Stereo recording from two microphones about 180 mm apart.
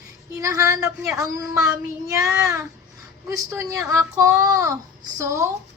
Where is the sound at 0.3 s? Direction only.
15° right (ahead or behind).